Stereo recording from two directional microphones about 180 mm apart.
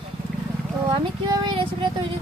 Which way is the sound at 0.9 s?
25° right (ahead or behind).